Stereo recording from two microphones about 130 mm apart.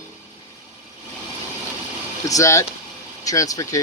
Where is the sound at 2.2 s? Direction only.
25° left (ahead or behind).